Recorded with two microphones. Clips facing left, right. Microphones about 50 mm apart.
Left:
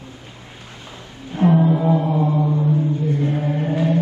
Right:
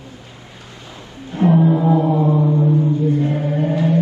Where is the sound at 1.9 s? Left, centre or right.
Centre.